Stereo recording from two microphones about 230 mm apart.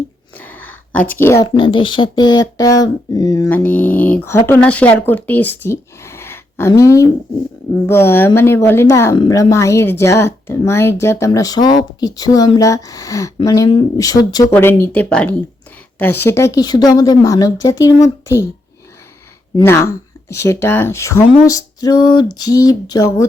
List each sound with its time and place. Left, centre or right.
0.3 s a sound: centre
1.1 s speech: centre
1.5 s speech: left
19.5 s speech: centre